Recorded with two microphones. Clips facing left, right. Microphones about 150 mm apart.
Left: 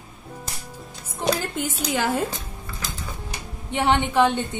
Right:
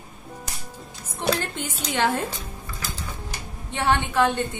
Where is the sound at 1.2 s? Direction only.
5° left (ahead or behind).